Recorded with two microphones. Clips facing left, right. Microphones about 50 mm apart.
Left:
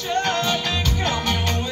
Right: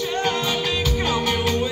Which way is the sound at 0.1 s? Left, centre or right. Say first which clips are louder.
Left 4 dB; centre.